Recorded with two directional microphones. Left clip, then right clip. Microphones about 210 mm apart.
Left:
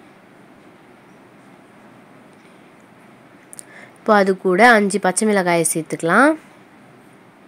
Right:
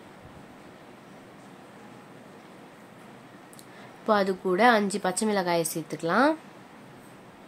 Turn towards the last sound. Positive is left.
turn(degrees=30)  # may be behind; listen again after turning